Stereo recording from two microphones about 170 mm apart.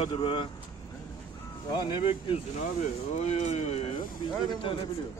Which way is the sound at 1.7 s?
25° left (ahead or behind).